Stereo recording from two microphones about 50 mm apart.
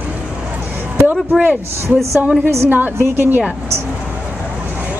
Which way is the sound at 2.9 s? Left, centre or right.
Right.